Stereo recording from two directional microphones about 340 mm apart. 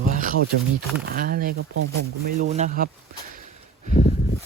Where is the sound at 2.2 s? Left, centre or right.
Right.